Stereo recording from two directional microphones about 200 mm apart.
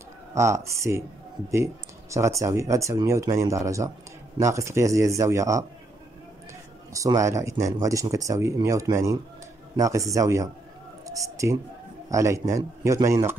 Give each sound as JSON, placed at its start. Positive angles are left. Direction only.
{"t": 0.3, "sound": "speech", "side_deg": -15}
{"t": 6.9, "sound": "speech", "side_deg": -15}
{"t": 11.1, "sound": "whispering", "side_deg": -15}
{"t": 12.1, "sound": "speech", "side_deg": -15}